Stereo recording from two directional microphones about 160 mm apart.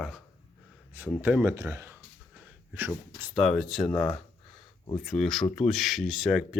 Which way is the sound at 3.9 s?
30° left (ahead or behind).